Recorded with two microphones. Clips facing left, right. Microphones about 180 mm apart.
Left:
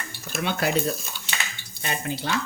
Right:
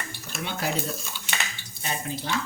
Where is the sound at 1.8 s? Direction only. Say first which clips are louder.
Left 3 dB; 70° left (ahead or behind).